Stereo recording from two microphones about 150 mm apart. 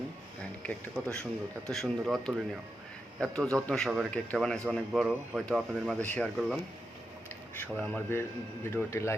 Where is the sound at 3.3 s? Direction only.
5° left (ahead or behind).